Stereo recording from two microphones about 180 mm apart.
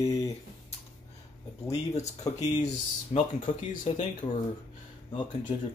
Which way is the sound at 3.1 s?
40° left (ahead or behind).